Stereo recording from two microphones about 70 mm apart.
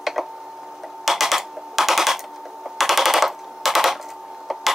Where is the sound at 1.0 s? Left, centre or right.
Centre.